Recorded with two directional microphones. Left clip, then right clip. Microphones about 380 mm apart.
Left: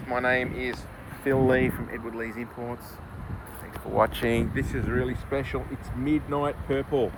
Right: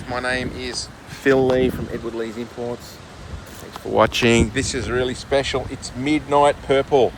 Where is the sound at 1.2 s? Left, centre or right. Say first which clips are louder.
Right 7 dB; centre.